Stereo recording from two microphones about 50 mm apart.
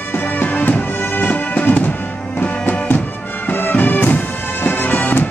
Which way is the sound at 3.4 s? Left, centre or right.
Left.